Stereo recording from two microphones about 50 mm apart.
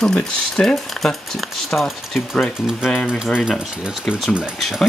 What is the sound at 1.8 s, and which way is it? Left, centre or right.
Speech, centre.